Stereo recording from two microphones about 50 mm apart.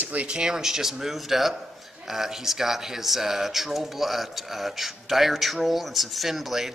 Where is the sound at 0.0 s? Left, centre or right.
Right.